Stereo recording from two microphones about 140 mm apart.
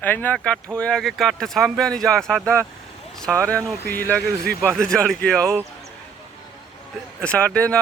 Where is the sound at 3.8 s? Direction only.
90° right.